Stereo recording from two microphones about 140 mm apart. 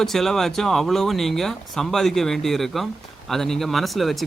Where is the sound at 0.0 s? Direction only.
Centre (ahead or behind).